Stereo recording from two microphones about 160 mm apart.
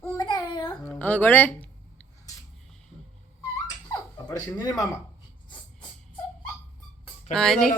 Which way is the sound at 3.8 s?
25° left (ahead or behind).